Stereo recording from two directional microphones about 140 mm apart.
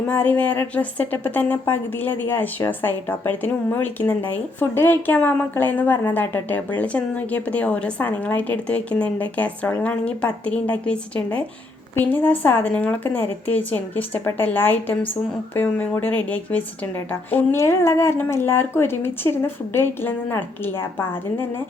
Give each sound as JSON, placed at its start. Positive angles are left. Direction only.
{"t": 0.1, "sound": "a woman's voice", "side_deg": 10}